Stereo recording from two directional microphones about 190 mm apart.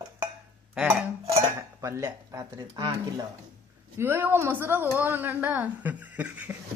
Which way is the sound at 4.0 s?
10° right (ahead or behind).